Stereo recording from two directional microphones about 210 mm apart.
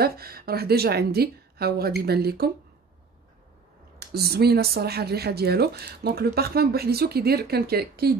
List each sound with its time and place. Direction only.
0.0 s speech: 45° right (ahead or behind)
4.0 s speech: 50° right (ahead or behind)